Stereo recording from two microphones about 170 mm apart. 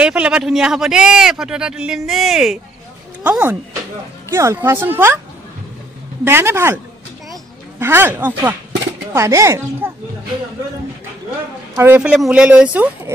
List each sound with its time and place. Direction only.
0.0 s speech: 5° right (ahead or behind)
6.2 s speech: 15° right (ahead or behind)
7.8 s speech: 15° right (ahead or behind)
11.7 s speech: 10° right (ahead or behind)